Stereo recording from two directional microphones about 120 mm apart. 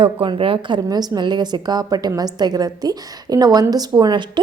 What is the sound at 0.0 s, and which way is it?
A woman's voice, 45° right (ahead or behind).